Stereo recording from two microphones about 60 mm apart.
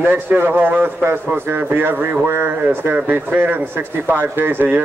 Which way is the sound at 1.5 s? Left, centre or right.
Right.